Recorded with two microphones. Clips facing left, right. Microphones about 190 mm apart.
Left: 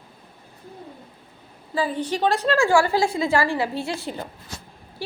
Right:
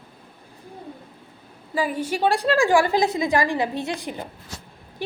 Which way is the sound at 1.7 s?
10° right (ahead or behind).